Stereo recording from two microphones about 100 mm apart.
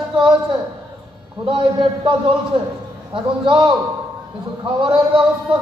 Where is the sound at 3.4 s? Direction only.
55° right (ahead or behind).